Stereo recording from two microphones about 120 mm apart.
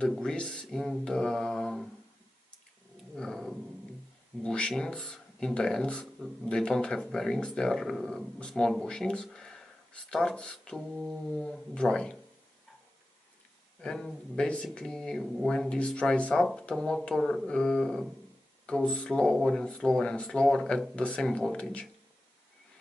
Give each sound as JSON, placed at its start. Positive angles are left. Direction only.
{"t": 0.0, "sound": "speech", "side_deg": 5}
{"t": 3.2, "sound": "speech", "side_deg": 5}
{"t": 13.7, "sound": "speech", "side_deg": 5}